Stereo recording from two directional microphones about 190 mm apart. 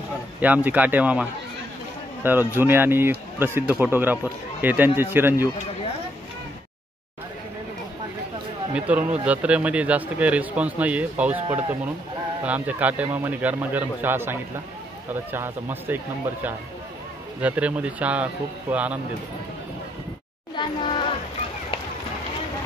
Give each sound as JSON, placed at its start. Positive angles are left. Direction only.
{"t": 0.7, "sound": "speech", "side_deg": -10}
{"t": 8.7, "sound": "speech", "side_deg": -5}
{"t": 12.4, "sound": "speech", "side_deg": -10}
{"t": 17.4, "sound": "speech", "side_deg": -5}
{"t": 20.5, "sound": "music", "side_deg": 25}